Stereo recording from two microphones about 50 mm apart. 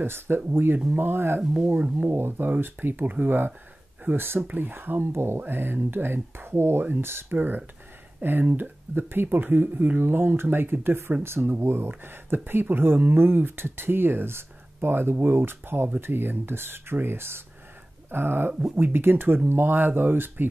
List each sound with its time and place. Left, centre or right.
0.0 s speech: right
1.4 s speech: centre
2.0 s speech: right
5.1 s speech: right
5.4 s speech: right
6.8 s speech: right